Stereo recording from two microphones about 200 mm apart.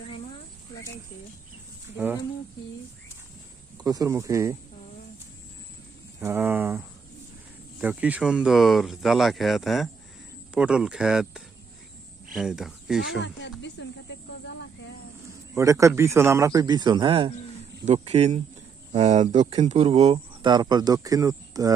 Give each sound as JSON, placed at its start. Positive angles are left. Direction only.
{"t": 3.8, "sound": "speech", "side_deg": -15}
{"t": 6.1, "sound": "speech", "side_deg": -10}
{"t": 13.0, "sound": "speech", "side_deg": 60}
{"t": 13.6, "sound": "snake", "side_deg": 60}
{"t": 15.5, "sound": "speech", "side_deg": -15}